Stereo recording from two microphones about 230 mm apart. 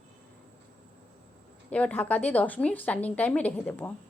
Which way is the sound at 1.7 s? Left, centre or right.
Centre.